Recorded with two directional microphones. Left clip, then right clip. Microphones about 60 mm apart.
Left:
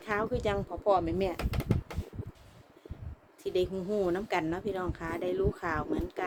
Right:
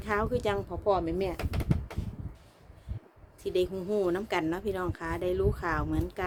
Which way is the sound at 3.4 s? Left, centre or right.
Right.